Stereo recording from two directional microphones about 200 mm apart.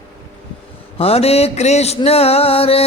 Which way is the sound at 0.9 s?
30° left (ahead or behind).